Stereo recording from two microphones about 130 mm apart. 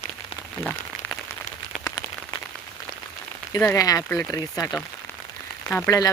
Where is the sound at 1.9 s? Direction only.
30° left (ahead or behind).